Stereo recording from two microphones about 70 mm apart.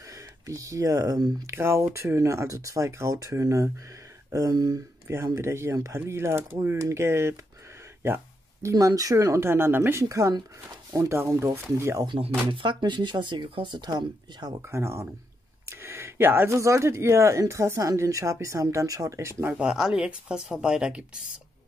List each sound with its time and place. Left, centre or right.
0.0 s speech: right
1.4 s speech: right
5.0 s speech: right
8.6 s speech: right
9.1 s speech: right
10.0 s speech: right
12.6 s speech: right
14.6 s speech: right
15.6 s a sound: right
16.5 s speech: right
19.5 s speech: centre